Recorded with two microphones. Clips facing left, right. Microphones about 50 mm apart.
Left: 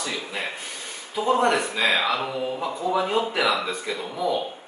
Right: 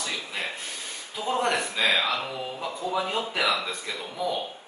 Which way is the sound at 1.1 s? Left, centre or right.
Centre.